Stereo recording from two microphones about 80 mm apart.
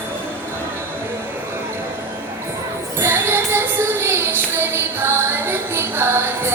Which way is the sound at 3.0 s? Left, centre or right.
Right.